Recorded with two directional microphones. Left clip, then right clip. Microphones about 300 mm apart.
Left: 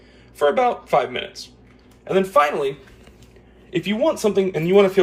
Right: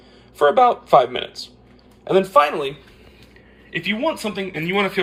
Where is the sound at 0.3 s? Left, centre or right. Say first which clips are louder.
Right 4 dB; centre.